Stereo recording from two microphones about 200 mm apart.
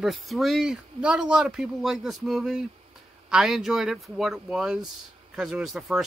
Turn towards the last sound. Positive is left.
turn(degrees=0)  # may be behind; listen again after turning